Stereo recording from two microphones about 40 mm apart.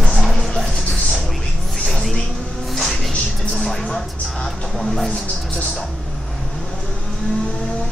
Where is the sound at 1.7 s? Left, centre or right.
Centre.